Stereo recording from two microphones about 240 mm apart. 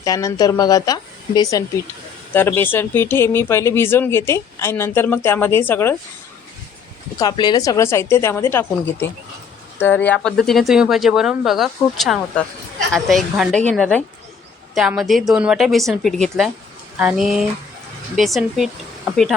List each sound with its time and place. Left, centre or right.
0.0 s speech: centre
7.2 s speech: centre